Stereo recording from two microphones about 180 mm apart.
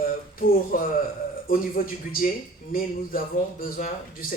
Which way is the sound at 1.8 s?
55° left (ahead or behind).